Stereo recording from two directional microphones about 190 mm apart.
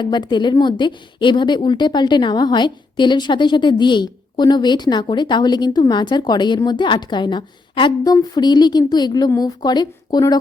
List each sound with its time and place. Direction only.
0.0 s a woman's voice: 25° left (ahead or behind)